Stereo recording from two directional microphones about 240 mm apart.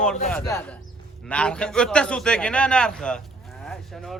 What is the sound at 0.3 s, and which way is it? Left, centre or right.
A man's voice, centre.